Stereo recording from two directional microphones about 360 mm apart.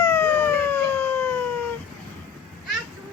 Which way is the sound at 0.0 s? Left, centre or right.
Centre.